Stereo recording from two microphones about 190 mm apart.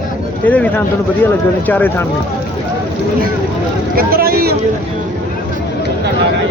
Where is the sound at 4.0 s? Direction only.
50° right (ahead or behind).